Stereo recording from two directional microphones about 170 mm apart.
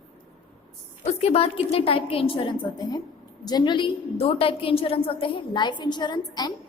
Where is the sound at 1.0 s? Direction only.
40° left (ahead or behind).